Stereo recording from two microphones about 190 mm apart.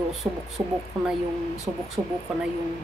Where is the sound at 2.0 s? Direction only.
20° right (ahead or behind).